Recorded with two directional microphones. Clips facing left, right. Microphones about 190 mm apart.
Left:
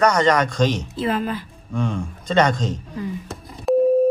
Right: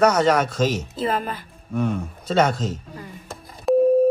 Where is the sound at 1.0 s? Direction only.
45° right (ahead or behind).